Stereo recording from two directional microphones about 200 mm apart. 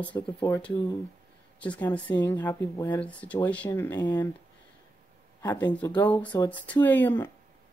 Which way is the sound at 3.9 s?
20° left (ahead or behind).